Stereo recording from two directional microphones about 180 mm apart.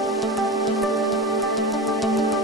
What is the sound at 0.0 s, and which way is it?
Music, centre (ahead or behind).